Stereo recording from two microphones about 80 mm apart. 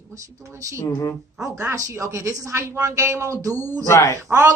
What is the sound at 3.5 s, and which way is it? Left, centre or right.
Speech, left.